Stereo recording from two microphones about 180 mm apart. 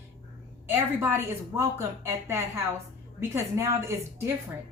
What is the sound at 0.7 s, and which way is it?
Speech, 15° right (ahead or behind).